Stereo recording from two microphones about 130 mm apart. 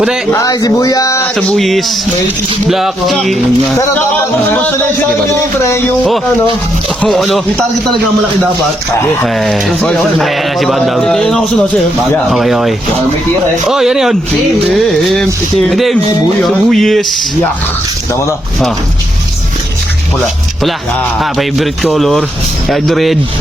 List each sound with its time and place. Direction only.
0.3 s speech: 25° left (ahead or behind)
1.4 s speech: 5° left (ahead or behind)
3.8 s speech: 20° left (ahead or behind)
7.0 s speech: 5° left (ahead or behind)
9.2 s speech: centre (ahead or behind)
21.2 s speech: centre (ahead or behind)